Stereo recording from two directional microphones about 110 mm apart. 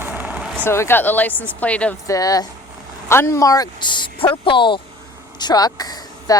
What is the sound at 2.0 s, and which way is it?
Speech, 30° left (ahead or behind).